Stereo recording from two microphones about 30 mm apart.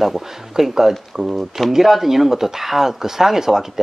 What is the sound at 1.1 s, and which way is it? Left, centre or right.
Speech, right.